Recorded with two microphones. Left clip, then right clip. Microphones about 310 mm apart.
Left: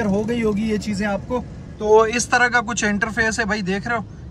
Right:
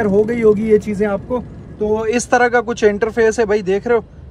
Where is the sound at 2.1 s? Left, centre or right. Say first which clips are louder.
Right 4 dB; centre.